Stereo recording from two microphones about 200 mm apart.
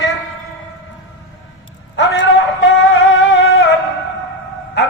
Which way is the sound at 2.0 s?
65° left (ahead or behind).